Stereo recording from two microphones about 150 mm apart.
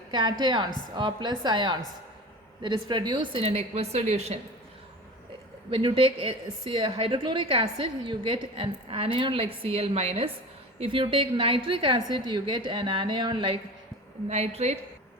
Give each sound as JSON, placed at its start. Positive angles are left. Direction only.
{"t": 0.1, "sound": "a woman's voice", "side_deg": -30}
{"t": 5.7, "sound": "a woman's voice", "side_deg": -35}
{"t": 14.3, "sound": "a woman's voice", "side_deg": -45}